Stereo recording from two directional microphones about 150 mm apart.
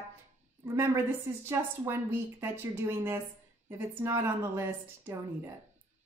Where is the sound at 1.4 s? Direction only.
15° right (ahead or behind).